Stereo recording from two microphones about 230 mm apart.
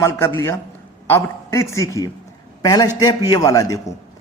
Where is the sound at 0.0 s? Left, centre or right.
Centre.